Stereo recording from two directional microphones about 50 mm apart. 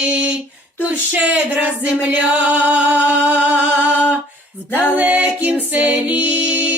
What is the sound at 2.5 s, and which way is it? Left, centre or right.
Music, right.